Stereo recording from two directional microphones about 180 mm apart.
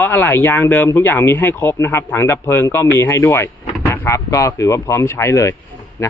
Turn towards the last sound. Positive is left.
turn(degrees=15)  # may be behind; listen again after turning